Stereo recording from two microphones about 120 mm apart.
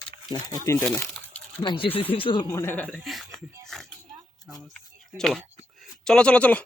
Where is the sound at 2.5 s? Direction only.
20° left (ahead or behind).